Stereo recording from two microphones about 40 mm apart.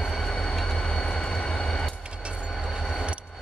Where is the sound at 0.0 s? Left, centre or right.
Centre.